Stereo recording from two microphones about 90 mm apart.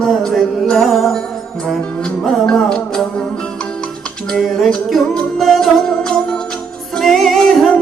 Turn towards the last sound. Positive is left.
turn(degrees=0)  # may be behind; listen again after turning